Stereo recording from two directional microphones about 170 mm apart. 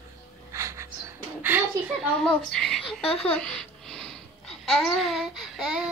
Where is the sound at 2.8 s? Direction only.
30° left (ahead or behind).